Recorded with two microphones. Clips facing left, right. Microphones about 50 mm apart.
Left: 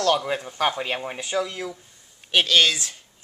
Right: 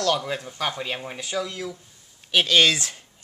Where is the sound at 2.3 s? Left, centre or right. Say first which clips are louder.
Even; centre.